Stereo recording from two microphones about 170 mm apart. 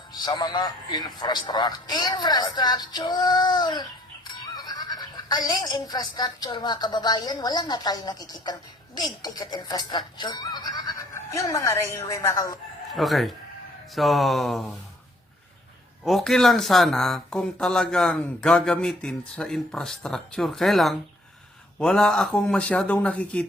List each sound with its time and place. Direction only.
0.1 s a man's voice: 25° left (ahead or behind)
4.5 s a sound: 25° left (ahead or behind)
5.5 s a man's voice: 25° left (ahead or behind)
12.9 s speech: centre (ahead or behind)
16.0 s speech: centre (ahead or behind)